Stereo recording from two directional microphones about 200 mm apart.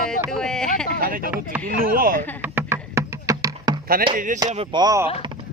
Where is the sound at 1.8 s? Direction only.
45° right (ahead or behind).